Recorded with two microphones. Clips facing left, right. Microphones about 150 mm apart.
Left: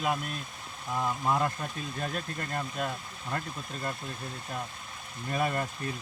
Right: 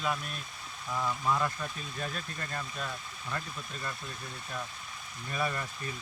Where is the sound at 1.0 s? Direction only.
30° left (ahead or behind).